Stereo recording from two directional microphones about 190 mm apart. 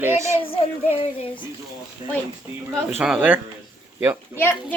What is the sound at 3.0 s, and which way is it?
Speech, 5° right (ahead or behind).